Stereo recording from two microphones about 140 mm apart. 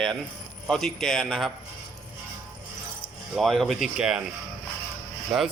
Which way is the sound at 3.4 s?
Centre (ahead or behind).